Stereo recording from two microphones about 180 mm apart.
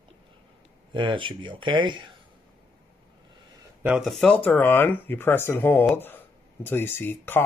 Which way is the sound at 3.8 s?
5° right (ahead or behind).